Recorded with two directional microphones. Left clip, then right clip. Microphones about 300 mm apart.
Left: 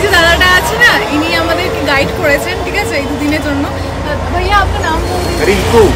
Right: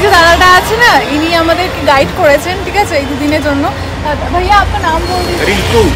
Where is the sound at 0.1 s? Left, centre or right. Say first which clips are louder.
Right 3 dB; centre.